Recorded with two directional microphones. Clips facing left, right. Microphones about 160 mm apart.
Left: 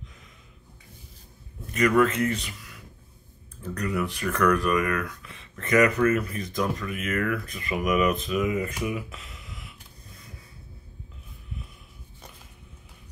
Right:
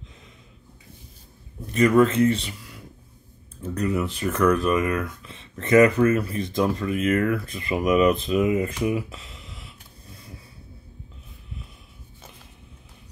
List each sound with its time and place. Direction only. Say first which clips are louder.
1.7 s speech: right 4 dB; 30° right (ahead or behind)